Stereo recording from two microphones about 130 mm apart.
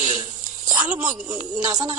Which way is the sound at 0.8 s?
10° right (ahead or behind).